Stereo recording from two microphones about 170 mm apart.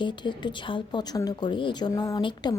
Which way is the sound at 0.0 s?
25° left (ahead or behind).